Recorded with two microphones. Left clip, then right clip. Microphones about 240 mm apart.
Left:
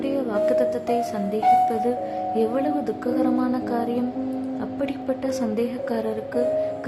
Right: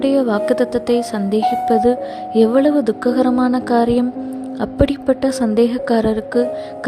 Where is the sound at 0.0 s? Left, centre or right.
Right.